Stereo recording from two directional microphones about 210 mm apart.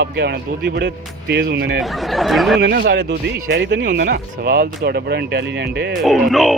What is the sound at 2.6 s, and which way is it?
Speech, 50° right (ahead or behind).